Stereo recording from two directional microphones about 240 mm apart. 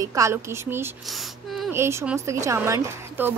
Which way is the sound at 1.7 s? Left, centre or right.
Centre.